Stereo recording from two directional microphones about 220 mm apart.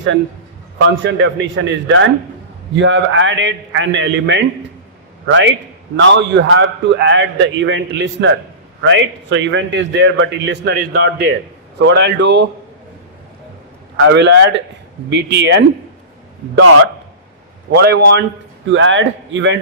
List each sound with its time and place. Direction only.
0.9 s a man's voice: 55° right (ahead or behind)
13.9 s a man's voice: 60° right (ahead or behind)
17.7 s a man's voice: 50° right (ahead or behind)